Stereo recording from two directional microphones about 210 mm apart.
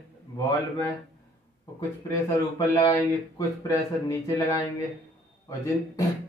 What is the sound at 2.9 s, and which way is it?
Speech, 15° left (ahead or behind).